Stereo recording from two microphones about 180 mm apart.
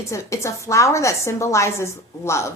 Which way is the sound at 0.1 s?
15° left (ahead or behind).